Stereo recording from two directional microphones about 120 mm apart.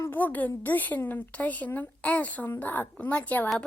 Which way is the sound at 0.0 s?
15° left (ahead or behind).